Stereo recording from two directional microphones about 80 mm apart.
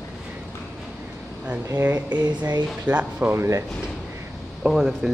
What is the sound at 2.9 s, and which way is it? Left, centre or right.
Speech, right.